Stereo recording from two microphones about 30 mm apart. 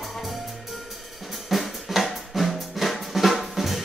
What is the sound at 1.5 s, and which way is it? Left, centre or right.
Drum, centre.